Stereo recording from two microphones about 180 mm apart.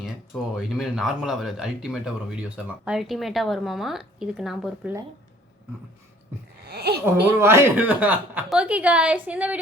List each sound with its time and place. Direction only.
0.5 s a woman's voice: centre (ahead or behind)
6.7 s speech: 65° right (ahead or behind)
7.0 s speech: 15° right (ahead or behind)